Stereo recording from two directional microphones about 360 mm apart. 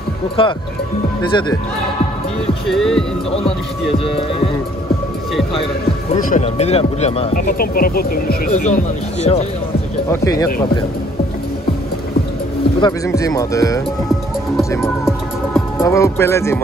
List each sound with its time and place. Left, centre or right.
0.4 s speech: centre
2.7 s music: centre
6.3 s speech: centre
12.8 s speech: centre